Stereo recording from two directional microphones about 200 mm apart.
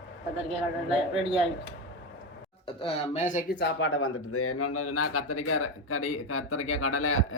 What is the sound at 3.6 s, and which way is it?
Speech, 80° left.